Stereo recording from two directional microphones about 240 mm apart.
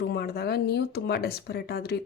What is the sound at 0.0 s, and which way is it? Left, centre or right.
A woman's voice, left.